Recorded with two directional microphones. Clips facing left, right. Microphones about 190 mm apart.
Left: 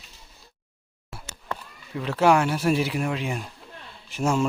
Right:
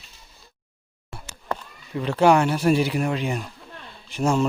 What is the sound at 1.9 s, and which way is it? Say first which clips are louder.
Speech: right 2 dB; centre (ahead or behind).